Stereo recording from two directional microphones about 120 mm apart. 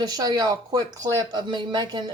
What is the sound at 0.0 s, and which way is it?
Speech, 35° right (ahead or behind).